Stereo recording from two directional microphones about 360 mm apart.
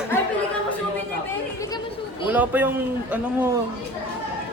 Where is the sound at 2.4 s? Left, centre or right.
Centre.